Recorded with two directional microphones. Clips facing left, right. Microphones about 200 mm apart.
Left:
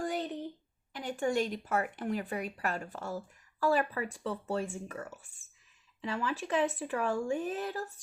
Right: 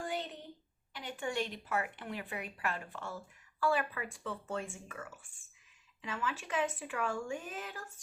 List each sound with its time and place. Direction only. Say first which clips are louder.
0.9 s speech: left 6 dB; 45° left (ahead or behind)